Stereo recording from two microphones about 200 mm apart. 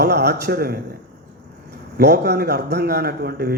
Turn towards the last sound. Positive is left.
turn(degrees=-50)  # may be behind; listen again after turning